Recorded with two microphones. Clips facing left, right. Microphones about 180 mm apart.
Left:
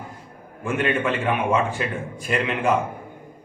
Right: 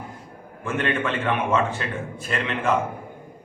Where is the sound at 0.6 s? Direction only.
10° left (ahead or behind).